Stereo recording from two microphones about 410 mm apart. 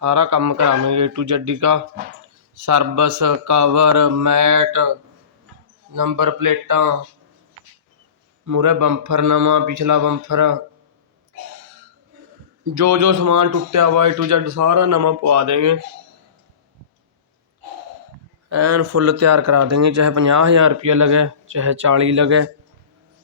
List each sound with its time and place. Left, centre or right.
0.0 s speech: right
8.4 s speech: right
12.6 s speech: right
18.4 s speech: right